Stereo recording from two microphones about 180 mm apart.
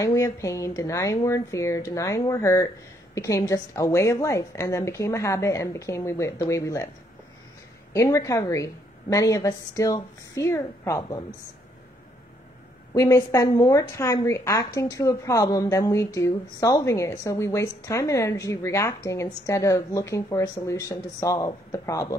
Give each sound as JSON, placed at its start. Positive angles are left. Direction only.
{"t": 0.0, "sound": "a woman's voice", "side_deg": 20}
{"t": 7.9, "sound": "a woman's voice", "side_deg": 15}
{"t": 12.9, "sound": "a woman's voice", "side_deg": 15}